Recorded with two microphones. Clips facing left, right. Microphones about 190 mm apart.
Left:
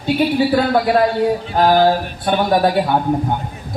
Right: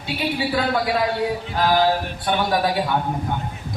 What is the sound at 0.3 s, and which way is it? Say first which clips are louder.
A man's voice: left 4 dB; 40° left (ahead or behind).